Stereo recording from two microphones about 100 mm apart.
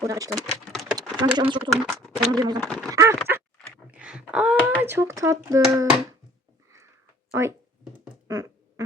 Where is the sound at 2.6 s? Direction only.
5° left (ahead or behind).